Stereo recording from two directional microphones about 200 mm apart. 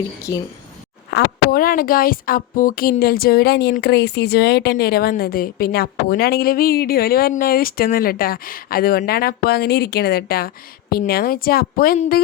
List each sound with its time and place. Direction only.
0.3 s speech: 20° left (ahead or behind)
1.1 s a woman's voice: 45° left (ahead or behind)